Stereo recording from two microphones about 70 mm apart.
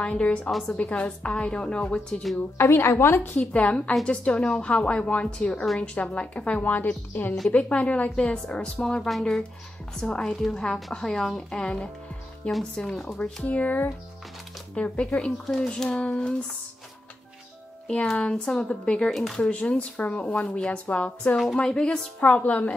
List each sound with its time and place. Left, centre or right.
0.0 s speech: centre
2.5 s a woman's voice: left
3.3 s speech: centre
10.2 s speech: centre
17.8 s speech: centre